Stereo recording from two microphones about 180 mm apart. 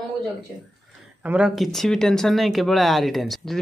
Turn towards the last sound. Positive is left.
turn(degrees=0)  # may be behind; listen again after turning